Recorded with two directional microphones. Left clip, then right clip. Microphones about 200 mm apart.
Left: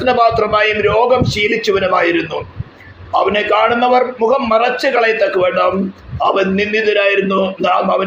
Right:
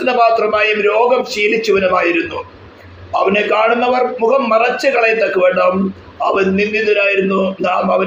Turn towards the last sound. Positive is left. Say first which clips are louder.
# left 1 dB
turn(degrees=40)  # may be behind; listen again after turning